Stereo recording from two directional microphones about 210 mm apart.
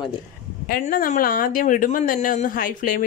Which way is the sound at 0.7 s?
45° left (ahead or behind).